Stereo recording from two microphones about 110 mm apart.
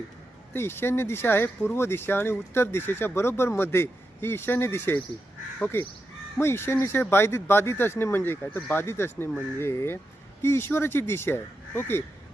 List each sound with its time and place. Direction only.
0.5 s speech: 20° left (ahead or behind)